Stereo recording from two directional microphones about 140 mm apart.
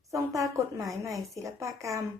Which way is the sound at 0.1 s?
25° right (ahead or behind).